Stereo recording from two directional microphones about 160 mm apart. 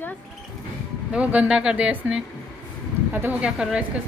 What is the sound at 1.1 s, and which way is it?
Speech, 10° right (ahead or behind).